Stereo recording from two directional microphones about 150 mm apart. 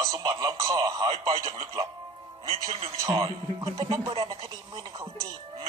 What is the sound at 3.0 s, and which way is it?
Speech, 25° right (ahead or behind).